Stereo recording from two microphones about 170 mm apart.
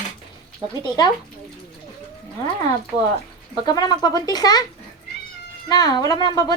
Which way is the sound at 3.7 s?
25° left (ahead or behind).